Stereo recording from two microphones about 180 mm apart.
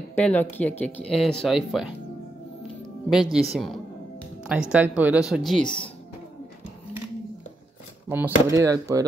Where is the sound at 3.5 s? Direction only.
Centre (ahead or behind).